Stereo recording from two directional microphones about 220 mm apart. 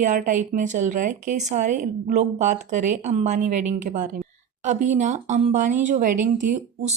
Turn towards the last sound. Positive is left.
turn(degrees=-35)  # may be behind; listen again after turning